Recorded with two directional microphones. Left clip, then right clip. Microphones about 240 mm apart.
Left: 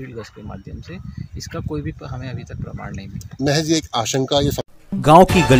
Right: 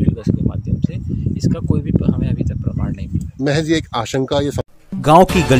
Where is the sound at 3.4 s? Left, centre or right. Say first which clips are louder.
Right 1 dB; right.